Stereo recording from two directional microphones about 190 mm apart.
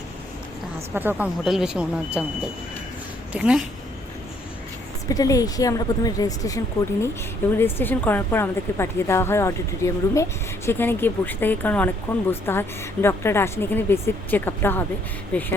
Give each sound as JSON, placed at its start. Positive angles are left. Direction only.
{"t": 0.9, "sound": "speech", "side_deg": -10}
{"t": 3.3, "sound": "speech", "side_deg": -5}
{"t": 5.0, "sound": "a woman's voice", "side_deg": 20}